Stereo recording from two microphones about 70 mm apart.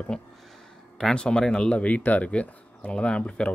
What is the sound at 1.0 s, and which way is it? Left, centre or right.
Speech, centre.